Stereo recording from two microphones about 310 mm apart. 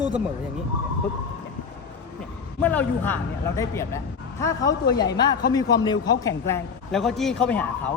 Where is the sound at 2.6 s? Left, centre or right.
Centre.